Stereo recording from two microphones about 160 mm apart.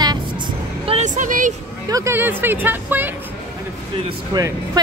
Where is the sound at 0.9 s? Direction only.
50° right (ahead or behind).